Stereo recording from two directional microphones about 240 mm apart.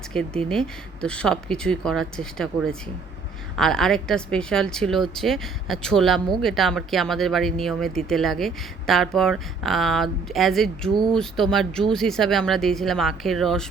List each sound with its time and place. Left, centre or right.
0.4 s speech: centre